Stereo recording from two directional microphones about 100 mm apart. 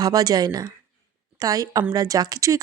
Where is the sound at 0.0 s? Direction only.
40° right (ahead or behind).